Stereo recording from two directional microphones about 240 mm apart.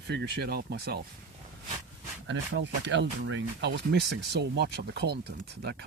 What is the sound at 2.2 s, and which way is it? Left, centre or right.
Speech, right.